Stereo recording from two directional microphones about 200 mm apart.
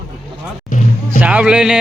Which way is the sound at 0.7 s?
40° left (ahead or behind).